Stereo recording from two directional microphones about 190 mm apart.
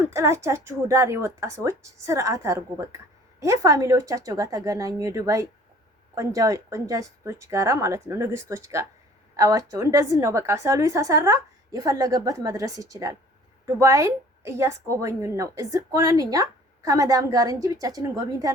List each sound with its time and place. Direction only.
0.0 s a woman's voice: 15° right (ahead or behind)